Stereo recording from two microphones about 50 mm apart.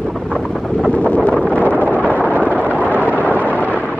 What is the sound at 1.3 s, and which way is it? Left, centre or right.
Wind noise, centre.